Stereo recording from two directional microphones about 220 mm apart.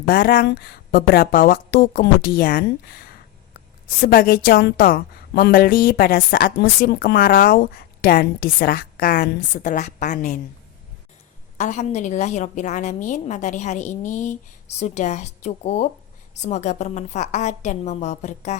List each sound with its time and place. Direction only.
0.0 s a woman's voice: 45° left (ahead or behind)
11.5 s a woman's voice: 35° left (ahead or behind)